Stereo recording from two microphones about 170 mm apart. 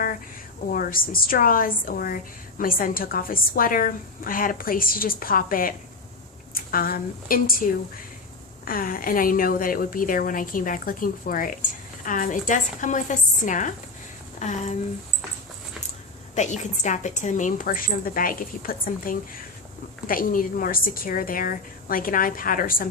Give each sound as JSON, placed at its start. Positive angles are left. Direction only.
{"t": 0.7, "sound": "a woman's voice", "side_deg": 55}
{"t": 16.3, "sound": "a woman's voice", "side_deg": 45}